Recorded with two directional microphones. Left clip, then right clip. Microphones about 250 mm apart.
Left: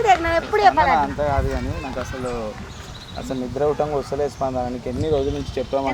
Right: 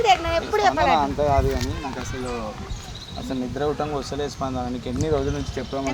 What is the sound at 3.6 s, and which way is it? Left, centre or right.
Speech, centre.